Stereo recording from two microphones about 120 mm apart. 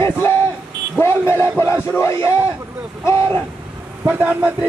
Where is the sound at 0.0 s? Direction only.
20° left (ahead or behind).